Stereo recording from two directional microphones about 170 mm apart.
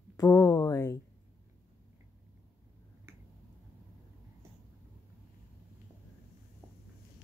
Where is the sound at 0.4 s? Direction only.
20° left (ahead or behind).